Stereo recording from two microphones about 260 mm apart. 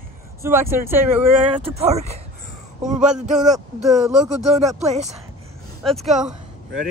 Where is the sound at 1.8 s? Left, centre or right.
Right.